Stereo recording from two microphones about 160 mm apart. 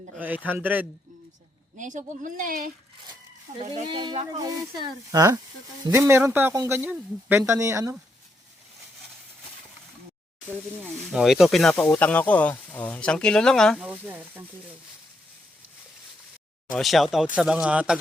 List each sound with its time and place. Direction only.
0.2 s speech: 10° right (ahead or behind)
1.8 s speech: 50° right (ahead or behind)
3.8 s speech: 30° right (ahead or behind)
11.1 s speech: centre (ahead or behind)
16.7 s speech: centre (ahead or behind)